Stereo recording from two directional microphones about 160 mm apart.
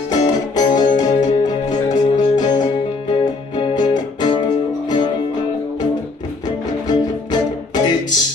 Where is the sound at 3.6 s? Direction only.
25° left (ahead or behind).